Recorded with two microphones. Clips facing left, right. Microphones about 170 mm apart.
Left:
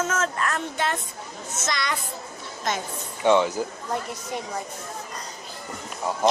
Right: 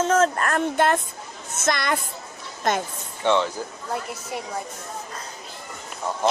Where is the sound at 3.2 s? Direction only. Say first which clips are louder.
Left 2 dB; 15° left (ahead or behind).